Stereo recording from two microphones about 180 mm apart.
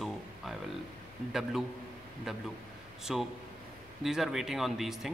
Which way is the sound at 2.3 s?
Centre (ahead or behind).